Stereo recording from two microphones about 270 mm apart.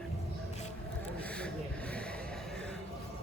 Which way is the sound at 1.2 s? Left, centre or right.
Centre.